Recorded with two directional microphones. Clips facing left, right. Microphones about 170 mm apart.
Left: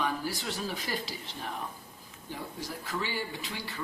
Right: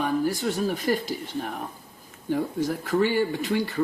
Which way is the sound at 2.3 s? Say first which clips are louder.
Right 14 dB; 55° right (ahead or behind).